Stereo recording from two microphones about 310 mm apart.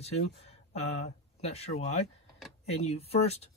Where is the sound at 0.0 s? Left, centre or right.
Centre.